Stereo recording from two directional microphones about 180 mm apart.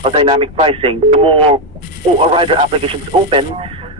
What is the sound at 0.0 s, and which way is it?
Speech, 30° right (ahead or behind).